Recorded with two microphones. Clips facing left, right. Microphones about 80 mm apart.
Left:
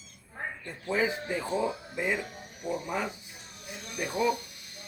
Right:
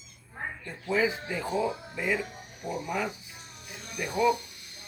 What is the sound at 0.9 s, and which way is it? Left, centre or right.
Speech, left.